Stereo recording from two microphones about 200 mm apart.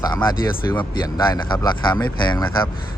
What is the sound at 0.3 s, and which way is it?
Speech, 15° left (ahead or behind).